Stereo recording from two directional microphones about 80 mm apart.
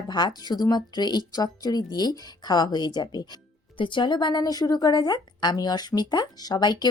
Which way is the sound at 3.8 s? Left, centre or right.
Left.